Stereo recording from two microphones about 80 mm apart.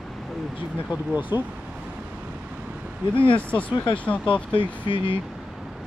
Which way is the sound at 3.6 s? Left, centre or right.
Left.